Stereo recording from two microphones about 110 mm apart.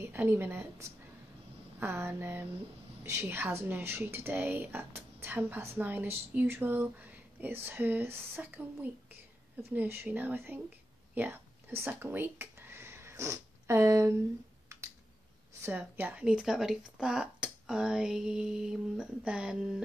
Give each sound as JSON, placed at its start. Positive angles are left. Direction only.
{"t": 0.0, "sound": "speech", "side_deg": -20}
{"t": 16.0, "sound": "speech", "side_deg": -15}